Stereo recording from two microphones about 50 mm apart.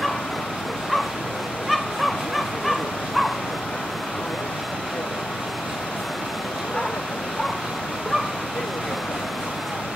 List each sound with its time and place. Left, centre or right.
1.7 s fowl: centre